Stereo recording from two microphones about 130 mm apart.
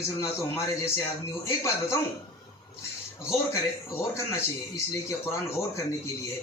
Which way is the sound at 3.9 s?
20° left (ahead or behind).